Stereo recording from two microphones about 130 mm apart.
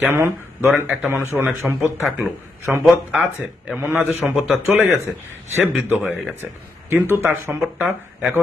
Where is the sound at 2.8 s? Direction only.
5° right (ahead or behind).